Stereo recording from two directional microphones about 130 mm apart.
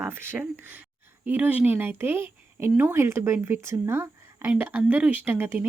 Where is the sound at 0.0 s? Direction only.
15° right (ahead or behind).